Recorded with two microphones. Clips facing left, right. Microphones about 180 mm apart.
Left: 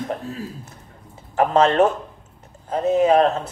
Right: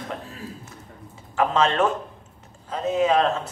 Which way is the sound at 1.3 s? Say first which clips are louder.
Left 5 dB; 40° left (ahead or behind).